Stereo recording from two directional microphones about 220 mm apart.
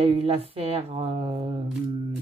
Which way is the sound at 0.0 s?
25° right (ahead or behind).